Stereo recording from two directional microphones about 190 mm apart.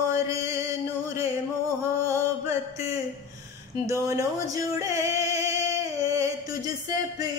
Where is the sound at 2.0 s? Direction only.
15° right (ahead or behind).